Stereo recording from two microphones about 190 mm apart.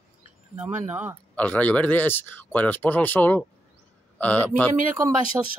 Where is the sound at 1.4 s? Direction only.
10° left (ahead or behind).